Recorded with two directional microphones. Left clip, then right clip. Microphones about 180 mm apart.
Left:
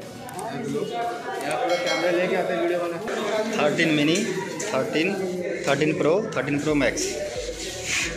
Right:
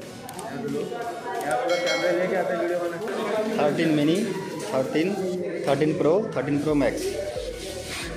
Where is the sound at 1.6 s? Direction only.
Centre (ahead or behind).